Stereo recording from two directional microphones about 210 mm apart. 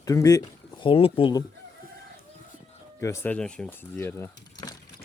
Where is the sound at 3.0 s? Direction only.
10° left (ahead or behind).